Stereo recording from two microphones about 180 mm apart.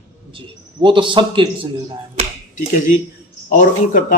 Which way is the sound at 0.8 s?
25° right (ahead or behind).